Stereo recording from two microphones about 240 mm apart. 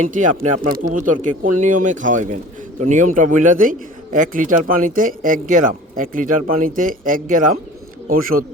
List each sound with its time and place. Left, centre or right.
0.0 s a man's voice: right